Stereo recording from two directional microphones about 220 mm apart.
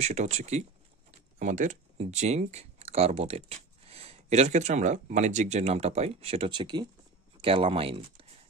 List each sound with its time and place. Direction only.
0.0 s speech: 30° right (ahead or behind)